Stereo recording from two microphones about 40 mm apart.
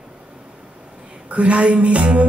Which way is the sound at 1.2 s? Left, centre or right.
Right.